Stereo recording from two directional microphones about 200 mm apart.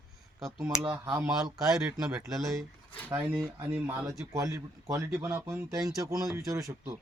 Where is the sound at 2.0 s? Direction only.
Centre (ahead or behind).